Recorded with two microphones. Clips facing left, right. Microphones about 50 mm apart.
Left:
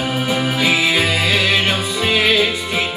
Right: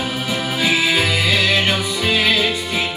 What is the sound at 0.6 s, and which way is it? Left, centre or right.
Music, left.